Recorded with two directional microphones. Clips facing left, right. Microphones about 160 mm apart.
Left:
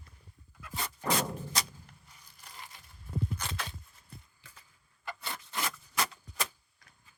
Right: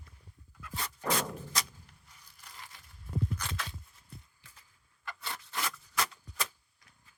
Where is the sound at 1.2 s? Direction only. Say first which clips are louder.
Left 2 dB; 30° left (ahead or behind).